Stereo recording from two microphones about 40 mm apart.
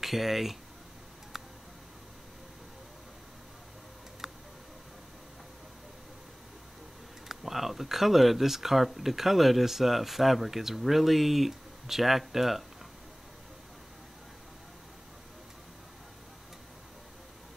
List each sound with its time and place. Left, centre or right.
0.0 s speech: centre
1.3 s a sound: centre
4.2 s tick: centre
7.2 s speech: centre